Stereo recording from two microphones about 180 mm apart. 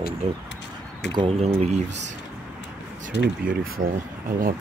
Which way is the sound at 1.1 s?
35° right (ahead or behind).